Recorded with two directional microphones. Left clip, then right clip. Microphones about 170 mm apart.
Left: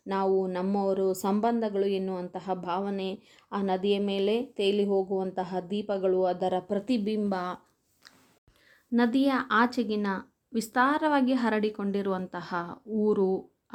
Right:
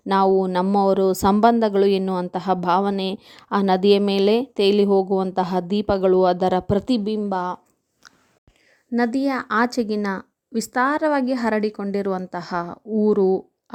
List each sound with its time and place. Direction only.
0.0 s speech: 50° right (ahead or behind); by 7.6 s 35° right (ahead or behind)
8.9 s speech: 30° right (ahead or behind)